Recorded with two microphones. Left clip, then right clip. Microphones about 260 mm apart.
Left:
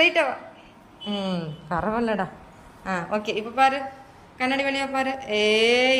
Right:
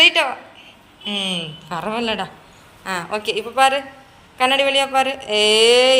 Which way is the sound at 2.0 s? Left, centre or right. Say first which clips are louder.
Right 3 dB; centre.